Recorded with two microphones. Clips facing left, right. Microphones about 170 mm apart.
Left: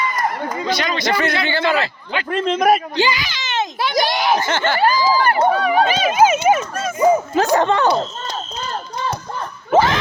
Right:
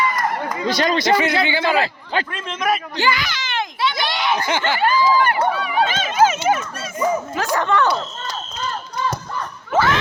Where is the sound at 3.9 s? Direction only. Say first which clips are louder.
Left 5 dB; 40° left (ahead or behind).